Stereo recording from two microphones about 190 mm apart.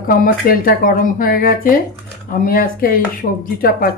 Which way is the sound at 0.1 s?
45° left (ahead or behind).